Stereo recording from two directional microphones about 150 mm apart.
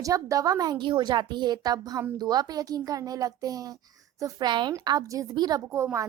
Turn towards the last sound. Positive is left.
turn(degrees=-20)  # may be behind; listen again after turning